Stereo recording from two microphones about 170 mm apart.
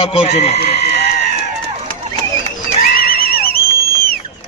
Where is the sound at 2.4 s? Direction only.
60° left (ahead or behind).